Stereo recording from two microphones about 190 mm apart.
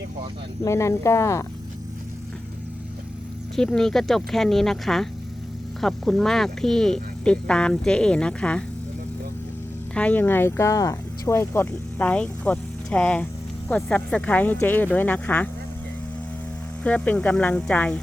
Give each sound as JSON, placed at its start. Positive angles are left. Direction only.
{"t": 0.6, "sound": "speech", "side_deg": 15}
{"t": 3.5, "sound": "speech", "side_deg": 5}
{"t": 9.9, "sound": "speech", "side_deg": 5}
{"t": 16.8, "sound": "speech", "side_deg": 10}